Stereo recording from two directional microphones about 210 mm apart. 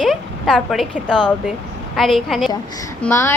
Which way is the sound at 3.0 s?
10° left (ahead or behind).